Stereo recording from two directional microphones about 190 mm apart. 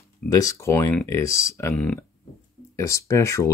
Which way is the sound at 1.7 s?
5° left (ahead or behind).